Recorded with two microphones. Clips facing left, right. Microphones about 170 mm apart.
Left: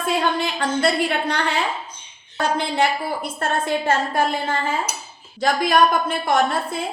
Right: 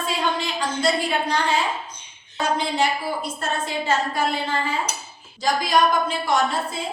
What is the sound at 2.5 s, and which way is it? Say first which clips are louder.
A woman's voice: left 1 dB; 60° left (ahead or behind).